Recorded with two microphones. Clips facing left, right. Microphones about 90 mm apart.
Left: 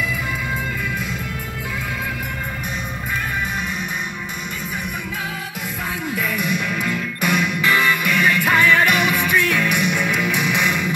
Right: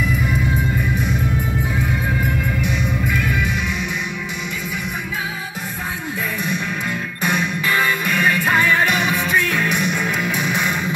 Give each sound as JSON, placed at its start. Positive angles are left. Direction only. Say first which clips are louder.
{"t": 6.4, "sound": "music", "louder": "left 1 dB", "side_deg": -30}
{"t": 8.0, "sound": "music", "louder": "even", "side_deg": 70}
{"t": 10.0, "sound": "music", "louder": "left 1 dB", "side_deg": -40}